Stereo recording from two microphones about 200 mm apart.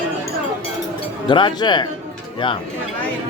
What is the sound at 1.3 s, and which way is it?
Speech, 25° left (ahead or behind).